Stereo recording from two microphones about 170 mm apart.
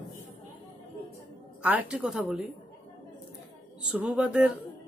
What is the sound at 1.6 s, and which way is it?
Speech, 10° right (ahead or behind).